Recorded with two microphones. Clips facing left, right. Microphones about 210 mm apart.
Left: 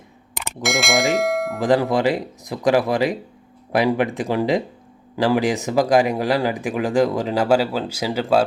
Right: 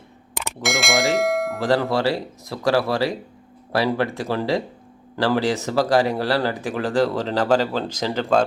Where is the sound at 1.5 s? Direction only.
15° left (ahead or behind).